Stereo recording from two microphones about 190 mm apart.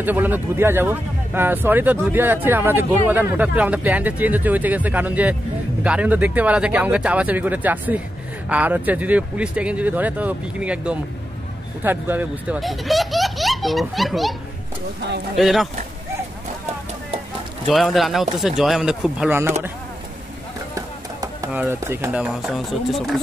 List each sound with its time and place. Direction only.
0.0 s speech: 10° right (ahead or behind)
15.3 s speech: centre (ahead or behind)
17.6 s speech: centre (ahead or behind)
20.7 s a sound: 15° right (ahead or behind)
21.5 s speech: 10° right (ahead or behind)